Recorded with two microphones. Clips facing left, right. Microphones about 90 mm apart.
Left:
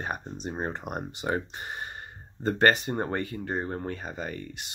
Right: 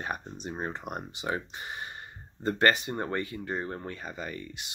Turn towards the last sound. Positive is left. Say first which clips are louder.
# left 2 dB
turn(degrees=35)  # may be behind; listen again after turning